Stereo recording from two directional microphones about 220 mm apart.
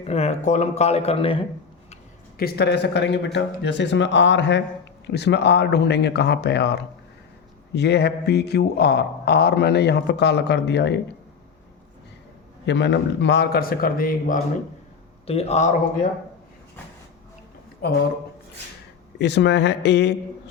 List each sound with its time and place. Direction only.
0.0 s speech: 30° left (ahead or behind)
2.4 s a man's voice: 50° left (ahead or behind)
12.6 s a man's voice: 55° left (ahead or behind)
15.3 s speech: 30° left (ahead or behind)
17.8 s a man's voice: 45° left (ahead or behind)
19.2 s a man's voice: 50° left (ahead or behind)